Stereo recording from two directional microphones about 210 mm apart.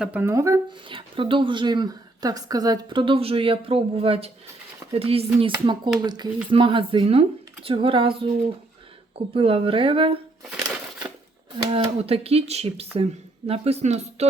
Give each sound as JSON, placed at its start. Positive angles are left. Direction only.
{"t": 0.0, "sound": "speech", "side_deg": -10}
{"t": 11.5, "sound": "speech", "side_deg": -25}